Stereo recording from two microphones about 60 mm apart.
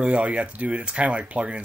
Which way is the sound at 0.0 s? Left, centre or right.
Right.